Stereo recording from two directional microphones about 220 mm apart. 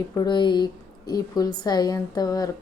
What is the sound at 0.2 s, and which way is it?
Speech, 20° left (ahead or behind).